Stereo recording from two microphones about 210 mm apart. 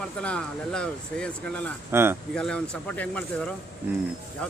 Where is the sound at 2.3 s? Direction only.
5° left (ahead or behind).